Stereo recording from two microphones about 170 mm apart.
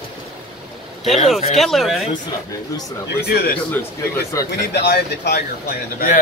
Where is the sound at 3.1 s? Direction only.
70° left (ahead or behind).